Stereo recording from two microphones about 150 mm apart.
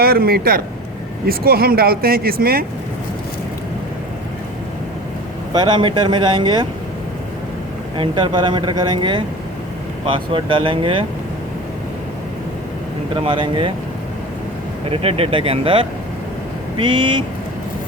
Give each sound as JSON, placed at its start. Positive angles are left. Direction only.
{"t": 0.0, "sound": "speech", "side_deg": -90}
{"t": 5.5, "sound": "speech", "side_deg": -30}
{"t": 7.9, "sound": "speech", "side_deg": -35}
{"t": 13.1, "sound": "speech", "side_deg": -35}
{"t": 14.8, "sound": "speech", "side_deg": -40}